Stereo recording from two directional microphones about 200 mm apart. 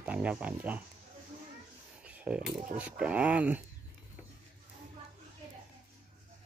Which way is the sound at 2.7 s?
5° right (ahead or behind).